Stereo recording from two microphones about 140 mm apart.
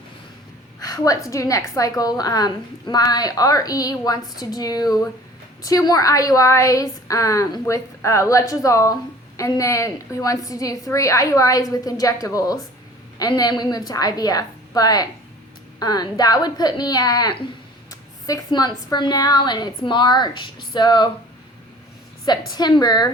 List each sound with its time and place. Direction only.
0.8 s a woman's voice: 25° left (ahead or behind)
22.3 s a woman's voice: 30° left (ahead or behind)